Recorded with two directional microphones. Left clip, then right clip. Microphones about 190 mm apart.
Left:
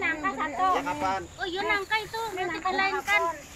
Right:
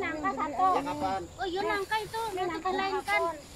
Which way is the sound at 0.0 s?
30° left (ahead or behind).